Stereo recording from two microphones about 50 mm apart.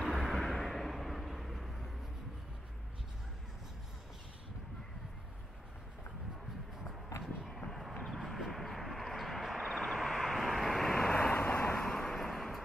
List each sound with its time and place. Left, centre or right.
0.0 s vehicle: centre
8.0 s vehicle: centre
11.3 s vehicle: left
11.7 s vehicle: centre